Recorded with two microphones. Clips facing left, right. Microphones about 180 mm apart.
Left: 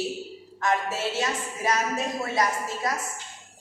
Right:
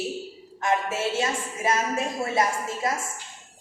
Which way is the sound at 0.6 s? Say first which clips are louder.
Right 1 dB; 25° right (ahead or behind).